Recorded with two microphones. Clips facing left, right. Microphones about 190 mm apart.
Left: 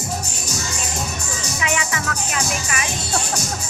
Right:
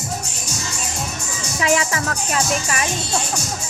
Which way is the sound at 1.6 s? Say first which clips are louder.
Right 6 dB; 35° right (ahead or behind).